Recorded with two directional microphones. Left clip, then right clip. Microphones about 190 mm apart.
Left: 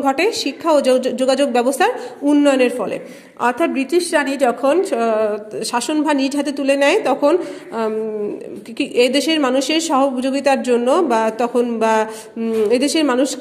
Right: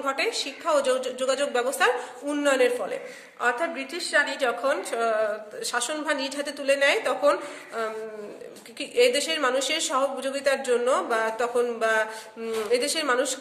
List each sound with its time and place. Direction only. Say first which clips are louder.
0.0 s a woman's voice: left 9 dB; 35° left (ahead or behind)